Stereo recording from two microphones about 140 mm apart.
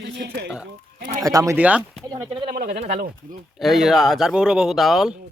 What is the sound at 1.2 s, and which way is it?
Speech, 25° right (ahead or behind).